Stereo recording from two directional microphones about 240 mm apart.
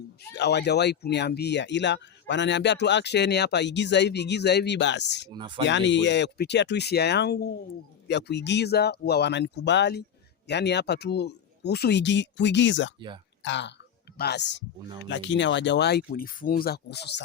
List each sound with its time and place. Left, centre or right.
0.3 s speech: left
5.3 s speech: centre
5.6 s speech: left